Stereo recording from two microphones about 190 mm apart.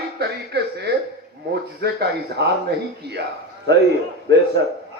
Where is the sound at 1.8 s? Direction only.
55° right (ahead or behind).